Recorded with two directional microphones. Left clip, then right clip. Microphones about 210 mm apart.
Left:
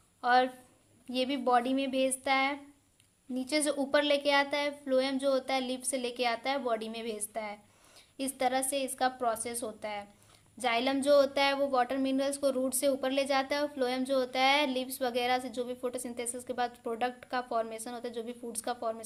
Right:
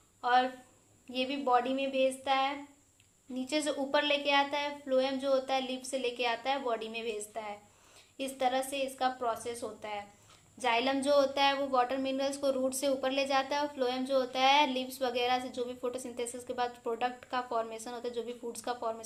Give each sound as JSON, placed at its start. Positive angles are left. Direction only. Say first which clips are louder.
{"t": 0.2, "sound": "a woman's voice", "louder": "left 2 dB", "side_deg": 30}